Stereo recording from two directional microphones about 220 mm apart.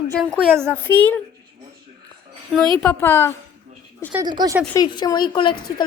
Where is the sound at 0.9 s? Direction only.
10° left (ahead or behind).